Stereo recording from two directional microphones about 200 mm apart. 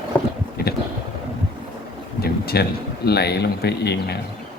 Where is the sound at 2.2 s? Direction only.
50° left (ahead or behind).